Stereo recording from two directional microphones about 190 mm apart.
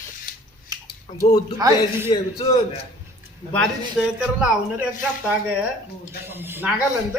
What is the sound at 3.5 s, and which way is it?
A man's voice, centre (ahead or behind).